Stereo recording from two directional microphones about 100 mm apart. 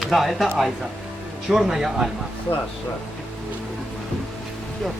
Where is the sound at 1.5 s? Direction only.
5° right (ahead or behind).